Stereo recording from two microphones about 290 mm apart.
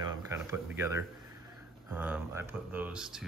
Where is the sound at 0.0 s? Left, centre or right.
Centre.